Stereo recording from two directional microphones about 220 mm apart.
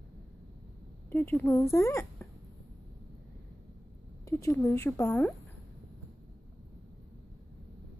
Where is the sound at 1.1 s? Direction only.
10° left (ahead or behind).